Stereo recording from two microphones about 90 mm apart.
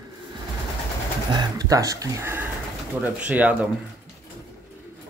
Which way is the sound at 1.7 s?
40° right (ahead or behind).